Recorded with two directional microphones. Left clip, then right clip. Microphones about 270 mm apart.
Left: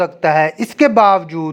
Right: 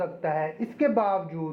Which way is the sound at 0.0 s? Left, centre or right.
Left.